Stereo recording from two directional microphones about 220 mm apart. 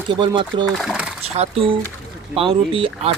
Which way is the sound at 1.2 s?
25° right (ahead or behind).